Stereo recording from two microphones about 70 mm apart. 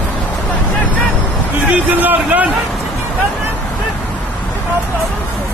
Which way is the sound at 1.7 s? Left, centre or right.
Right.